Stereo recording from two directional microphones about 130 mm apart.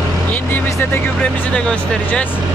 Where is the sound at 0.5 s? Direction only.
15° left (ahead or behind).